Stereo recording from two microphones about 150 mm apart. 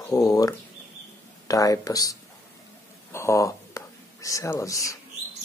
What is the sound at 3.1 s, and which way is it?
Whispering, 20° left (ahead or behind).